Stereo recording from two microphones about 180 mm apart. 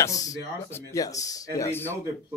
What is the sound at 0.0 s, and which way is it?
Speech, 20° left (ahead or behind).